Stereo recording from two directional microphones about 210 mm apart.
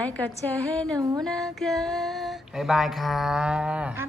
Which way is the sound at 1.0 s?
20° right (ahead or behind).